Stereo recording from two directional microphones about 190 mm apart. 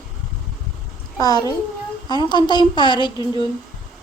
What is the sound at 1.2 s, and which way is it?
Speech, 20° left (ahead or behind).